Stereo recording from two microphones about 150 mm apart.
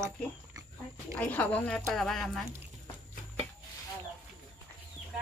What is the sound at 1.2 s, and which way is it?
Speech, 10° left (ahead or behind).